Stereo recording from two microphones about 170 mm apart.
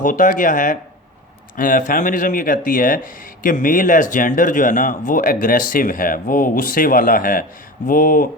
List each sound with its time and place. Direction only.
0.0 s speech: 50° left (ahead or behind)